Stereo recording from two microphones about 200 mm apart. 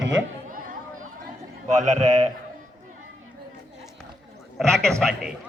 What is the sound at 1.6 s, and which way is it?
Speech, 35° right (ahead or behind).